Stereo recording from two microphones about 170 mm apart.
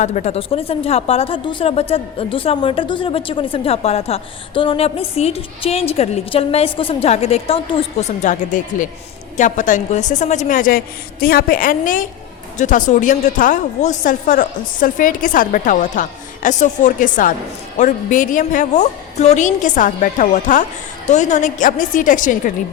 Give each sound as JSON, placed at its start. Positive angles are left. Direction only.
{"t": 0.0, "sound": "a woman's voice", "side_deg": 40}